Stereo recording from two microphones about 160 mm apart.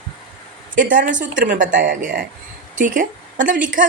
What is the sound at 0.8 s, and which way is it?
A woman's voice, 60° right (ahead or behind).